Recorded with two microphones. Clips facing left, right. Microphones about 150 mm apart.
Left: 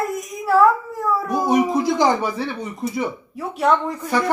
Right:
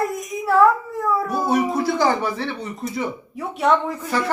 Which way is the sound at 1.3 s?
15° left (ahead or behind).